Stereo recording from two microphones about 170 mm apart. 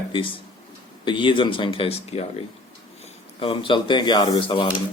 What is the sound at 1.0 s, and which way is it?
A man's voice, 30° left (ahead or behind).